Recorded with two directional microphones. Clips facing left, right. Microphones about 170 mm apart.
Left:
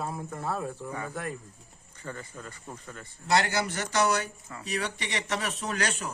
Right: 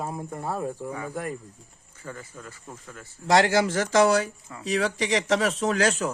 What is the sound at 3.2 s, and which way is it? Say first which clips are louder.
Speech: right 6 dB; 90° right.